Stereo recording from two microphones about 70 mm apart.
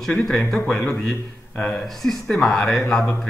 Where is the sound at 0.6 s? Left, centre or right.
Left.